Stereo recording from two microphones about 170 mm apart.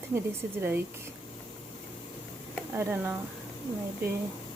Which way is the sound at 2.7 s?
10° right (ahead or behind).